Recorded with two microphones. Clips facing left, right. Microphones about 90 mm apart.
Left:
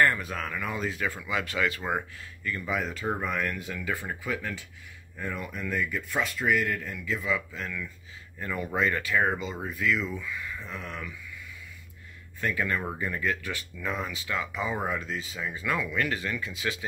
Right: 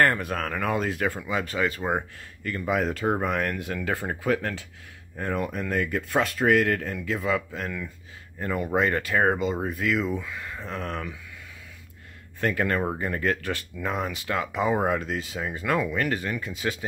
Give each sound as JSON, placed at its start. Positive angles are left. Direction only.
{"t": 0.0, "sound": "speech", "side_deg": -55}
{"t": 1.2, "sound": "speech", "side_deg": -35}
{"t": 1.8, "sound": "speech", "side_deg": -20}
{"t": 2.5, "sound": "speech", "side_deg": -40}
{"t": 2.8, "sound": "speech", "side_deg": -65}
{"t": 12.4, "sound": "speech", "side_deg": -55}
{"t": 13.7, "sound": "speech", "side_deg": -40}
{"t": 15.4, "sound": "speech", "side_deg": -45}